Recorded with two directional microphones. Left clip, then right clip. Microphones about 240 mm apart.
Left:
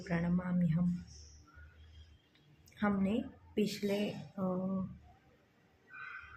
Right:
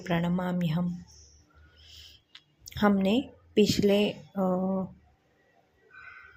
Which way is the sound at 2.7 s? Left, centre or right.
Right.